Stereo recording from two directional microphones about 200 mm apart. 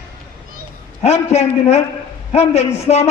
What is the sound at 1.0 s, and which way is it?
A man's voice, 30° left (ahead or behind).